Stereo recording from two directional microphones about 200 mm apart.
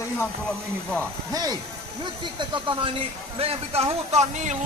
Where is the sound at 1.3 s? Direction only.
20° right (ahead or behind).